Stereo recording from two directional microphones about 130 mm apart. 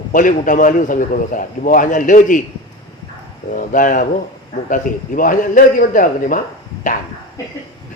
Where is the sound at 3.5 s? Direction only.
90° left.